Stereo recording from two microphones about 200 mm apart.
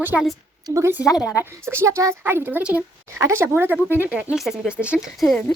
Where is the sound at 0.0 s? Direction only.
5° right (ahead or behind).